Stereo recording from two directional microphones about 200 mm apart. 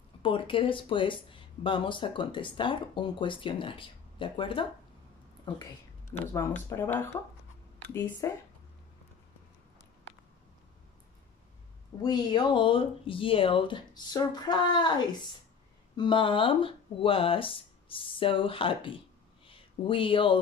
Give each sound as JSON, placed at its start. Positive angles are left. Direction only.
{"t": 0.2, "sound": "speech", "side_deg": 25}
{"t": 6.1, "sound": "speech", "side_deg": 10}
{"t": 8.2, "sound": "speech", "side_deg": 15}
{"t": 12.0, "sound": "speech", "side_deg": 20}
{"t": 16.0, "sound": "speech", "side_deg": 25}
{"t": 19.4, "sound": "a sound", "side_deg": 25}